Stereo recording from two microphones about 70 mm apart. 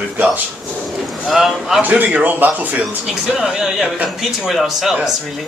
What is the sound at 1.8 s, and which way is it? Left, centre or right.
Speech, right.